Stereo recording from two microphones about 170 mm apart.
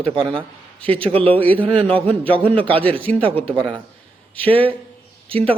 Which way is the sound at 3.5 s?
30° right (ahead or behind).